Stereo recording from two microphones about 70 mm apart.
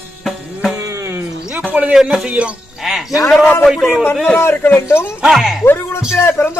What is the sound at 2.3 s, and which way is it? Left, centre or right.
Speech, centre.